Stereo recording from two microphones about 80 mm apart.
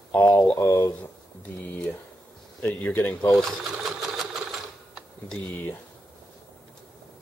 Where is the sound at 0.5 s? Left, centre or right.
Left.